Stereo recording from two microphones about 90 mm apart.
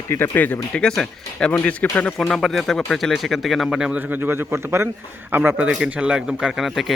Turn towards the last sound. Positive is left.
turn(degrees=0)  # may be behind; listen again after turning